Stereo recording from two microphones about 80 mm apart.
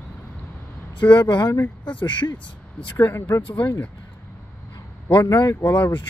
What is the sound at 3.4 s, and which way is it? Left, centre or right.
Speech, left.